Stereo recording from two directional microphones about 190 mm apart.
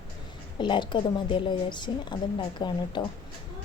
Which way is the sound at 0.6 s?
25° left (ahead or behind).